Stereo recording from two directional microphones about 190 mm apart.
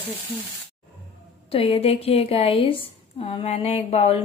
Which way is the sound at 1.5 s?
30° left (ahead or behind).